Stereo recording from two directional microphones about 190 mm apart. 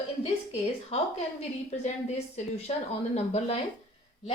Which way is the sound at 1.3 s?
35° left (ahead or behind).